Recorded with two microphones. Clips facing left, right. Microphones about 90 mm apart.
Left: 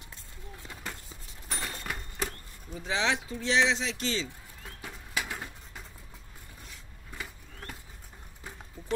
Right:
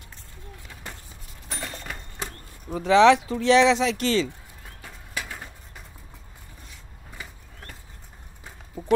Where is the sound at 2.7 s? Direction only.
65° right (ahead or behind).